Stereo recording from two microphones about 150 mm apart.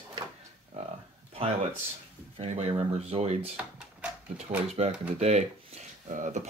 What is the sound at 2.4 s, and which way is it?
Speech, 45° right (ahead or behind).